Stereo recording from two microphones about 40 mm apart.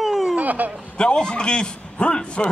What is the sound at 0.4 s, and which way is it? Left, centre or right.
Speech, right.